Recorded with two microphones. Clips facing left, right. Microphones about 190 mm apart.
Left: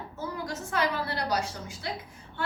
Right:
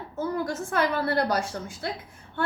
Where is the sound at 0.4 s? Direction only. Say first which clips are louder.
Left 1 dB; 55° right (ahead or behind).